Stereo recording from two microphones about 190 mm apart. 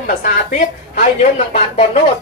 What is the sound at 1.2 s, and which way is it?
Speech, 30° left (ahead or behind).